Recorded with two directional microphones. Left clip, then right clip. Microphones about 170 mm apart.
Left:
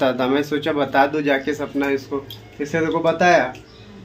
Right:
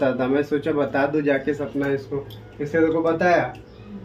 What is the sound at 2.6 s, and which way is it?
Speech, 35° left (ahead or behind).